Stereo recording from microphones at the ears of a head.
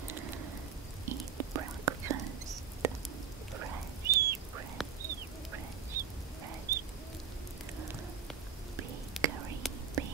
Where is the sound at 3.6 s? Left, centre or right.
Right.